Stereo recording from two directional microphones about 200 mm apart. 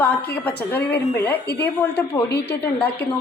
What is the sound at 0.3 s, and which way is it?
A woman's voice, 10° left (ahead or behind).